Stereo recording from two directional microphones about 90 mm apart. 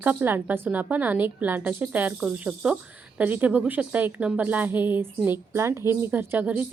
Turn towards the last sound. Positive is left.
turn(degrees=-25)  # may be behind; listen again after turning